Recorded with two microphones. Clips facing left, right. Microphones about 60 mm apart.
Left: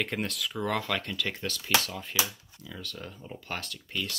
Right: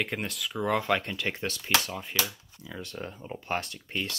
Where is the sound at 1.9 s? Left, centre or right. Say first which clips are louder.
Even; centre.